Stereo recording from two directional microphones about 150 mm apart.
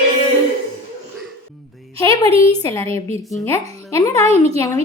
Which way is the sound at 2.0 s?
25° left (ahead or behind).